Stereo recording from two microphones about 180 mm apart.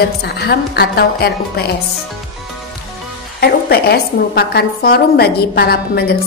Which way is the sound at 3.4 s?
60° left (ahead or behind).